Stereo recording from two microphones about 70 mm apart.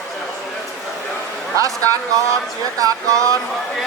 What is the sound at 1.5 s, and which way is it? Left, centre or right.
A man's voice, right.